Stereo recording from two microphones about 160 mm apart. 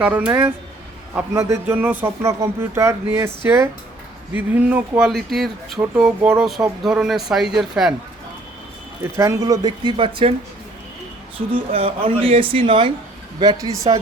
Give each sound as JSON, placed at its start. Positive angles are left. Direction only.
{"t": 0.0, "sound": "speech", "side_deg": -10}
{"t": 9.1, "sound": "speech", "side_deg": -20}
{"t": 11.3, "sound": "speech", "side_deg": -35}